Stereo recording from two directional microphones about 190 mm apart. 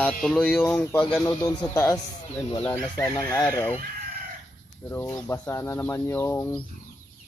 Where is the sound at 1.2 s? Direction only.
20° left (ahead or behind).